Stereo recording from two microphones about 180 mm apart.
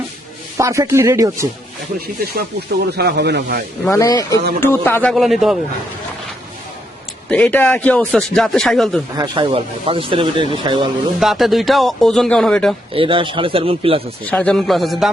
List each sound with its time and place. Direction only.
0.5 s speech: 15° right (ahead or behind)
2.0 s speech: 55° right (ahead or behind)
2.9 s speech: 65° right (ahead or behind)
3.8 s a man's voice: 15° left (ahead or behind)
5.1 s a man's voice: centre (ahead or behind)
7.3 s a man's voice: 10° left (ahead or behind)
9.1 s speech: 25° right (ahead or behind)
11.2 s a man's voice: centre (ahead or behind)
12.9 s speech: 30° right (ahead or behind)
14.3 s a man's voice: 5° left (ahead or behind)